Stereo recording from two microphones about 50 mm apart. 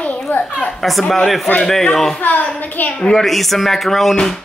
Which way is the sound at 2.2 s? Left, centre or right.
Left.